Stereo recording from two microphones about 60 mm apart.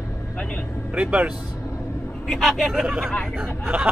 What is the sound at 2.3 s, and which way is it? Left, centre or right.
Speech, centre.